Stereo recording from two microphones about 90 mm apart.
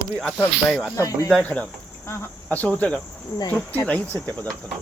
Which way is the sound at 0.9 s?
40° left (ahead or behind).